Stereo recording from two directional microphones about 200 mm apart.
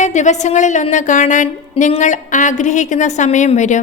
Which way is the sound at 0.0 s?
35° left (ahead or behind).